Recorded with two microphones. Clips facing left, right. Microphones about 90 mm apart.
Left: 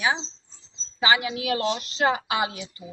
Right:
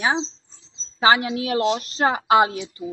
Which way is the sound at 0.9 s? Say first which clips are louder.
Right 5 dB; 40° right (ahead or behind).